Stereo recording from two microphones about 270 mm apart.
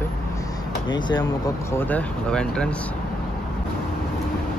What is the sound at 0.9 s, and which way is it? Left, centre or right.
Speech, centre.